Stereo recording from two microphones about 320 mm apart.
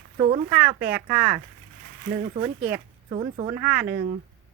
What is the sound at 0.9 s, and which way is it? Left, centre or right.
Speech, centre.